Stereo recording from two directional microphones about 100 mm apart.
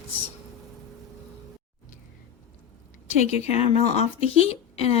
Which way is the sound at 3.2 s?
90° left.